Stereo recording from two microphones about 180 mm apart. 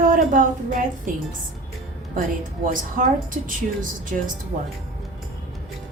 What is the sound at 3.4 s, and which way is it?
Speech, 50° right (ahead or behind).